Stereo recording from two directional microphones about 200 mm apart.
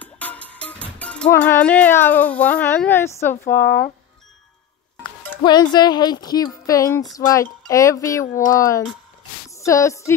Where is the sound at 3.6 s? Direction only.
50° left (ahead or behind).